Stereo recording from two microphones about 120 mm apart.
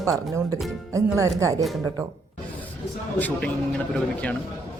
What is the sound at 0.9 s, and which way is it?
Speech, 25° right (ahead or behind).